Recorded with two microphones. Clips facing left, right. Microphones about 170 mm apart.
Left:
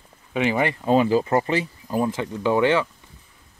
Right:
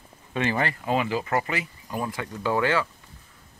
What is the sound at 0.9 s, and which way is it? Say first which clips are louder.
Speech: left 9 dB; 35° left (ahead or behind).